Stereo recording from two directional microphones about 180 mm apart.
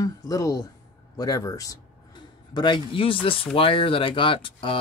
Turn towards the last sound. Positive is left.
turn(degrees=30)  # may be behind; listen again after turning